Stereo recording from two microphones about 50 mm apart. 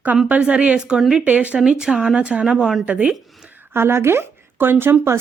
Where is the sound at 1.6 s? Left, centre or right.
Centre.